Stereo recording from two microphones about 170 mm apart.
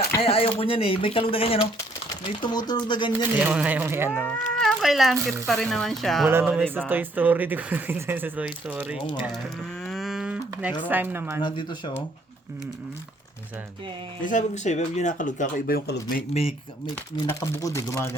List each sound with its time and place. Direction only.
0.2 s speech: 35° left (ahead or behind)
3.3 s speech: 10° right (ahead or behind)
4.3 s speech: centre (ahead or behind)
6.2 s speech: 10° right (ahead or behind)
9.8 s cattle: centre (ahead or behind)
10.8 s speech: 10° right (ahead or behind)
11.4 s speech: 30° left (ahead or behind)
14.2 s speech: 50° left (ahead or behind)
16.3 s speech: 35° left (ahead or behind)
17.2 s speech: 15° left (ahead or behind)